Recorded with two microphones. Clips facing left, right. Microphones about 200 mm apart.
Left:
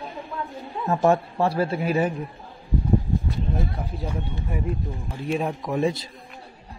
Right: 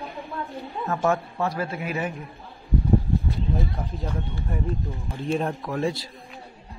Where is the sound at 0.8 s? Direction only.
30° left (ahead or behind).